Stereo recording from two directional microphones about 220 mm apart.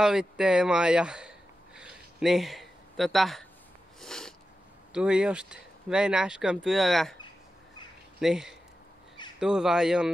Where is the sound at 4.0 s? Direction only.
Centre (ahead or behind).